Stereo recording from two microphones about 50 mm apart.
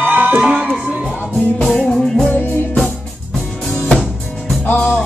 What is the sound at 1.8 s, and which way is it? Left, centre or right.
Music, centre.